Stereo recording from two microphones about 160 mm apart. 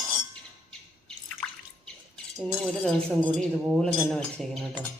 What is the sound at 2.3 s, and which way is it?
Speech, 5° left (ahead or behind).